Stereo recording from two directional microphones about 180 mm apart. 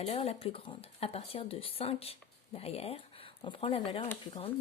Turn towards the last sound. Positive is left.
turn(degrees=30)  # may be behind; listen again after turning